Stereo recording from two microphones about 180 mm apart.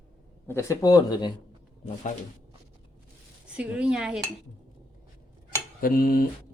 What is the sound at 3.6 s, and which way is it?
Speech, 5° right (ahead or behind).